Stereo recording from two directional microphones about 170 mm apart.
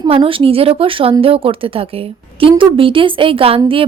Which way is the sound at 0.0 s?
30° right (ahead or behind).